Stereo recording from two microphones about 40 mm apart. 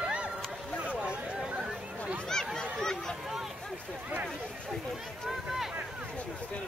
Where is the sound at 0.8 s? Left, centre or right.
Right.